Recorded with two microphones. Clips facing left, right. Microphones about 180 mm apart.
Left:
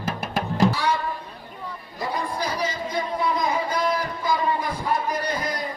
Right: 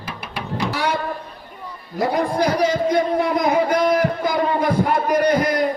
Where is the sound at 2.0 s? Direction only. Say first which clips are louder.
Right 9 dB; 75° right (ahead or behind).